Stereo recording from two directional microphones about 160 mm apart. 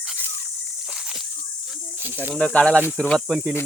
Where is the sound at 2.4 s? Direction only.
5° left (ahead or behind).